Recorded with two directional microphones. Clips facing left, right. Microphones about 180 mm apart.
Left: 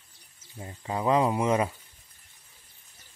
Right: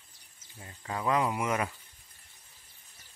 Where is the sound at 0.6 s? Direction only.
25° left (ahead or behind).